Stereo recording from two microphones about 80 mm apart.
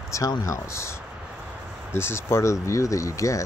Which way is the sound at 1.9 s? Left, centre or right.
Left.